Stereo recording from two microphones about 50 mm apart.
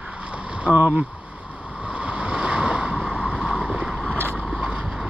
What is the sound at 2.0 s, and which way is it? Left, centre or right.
Boat, right.